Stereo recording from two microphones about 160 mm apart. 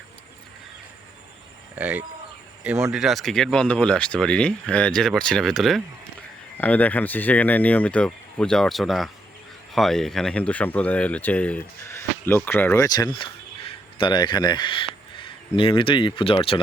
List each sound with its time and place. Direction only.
1.7 s speech: 10° right (ahead or behind); by 16.6 s 35° left (ahead or behind)